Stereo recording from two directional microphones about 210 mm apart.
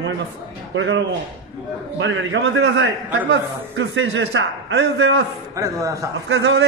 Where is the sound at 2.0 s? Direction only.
60° right (ahead or behind).